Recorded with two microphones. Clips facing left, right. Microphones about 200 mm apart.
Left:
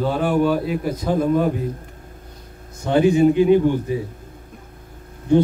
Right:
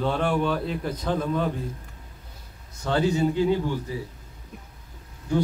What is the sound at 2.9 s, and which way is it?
A man's voice, 15° left (ahead or behind).